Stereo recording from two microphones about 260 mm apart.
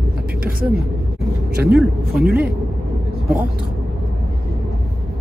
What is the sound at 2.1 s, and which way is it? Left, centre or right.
Speech, right.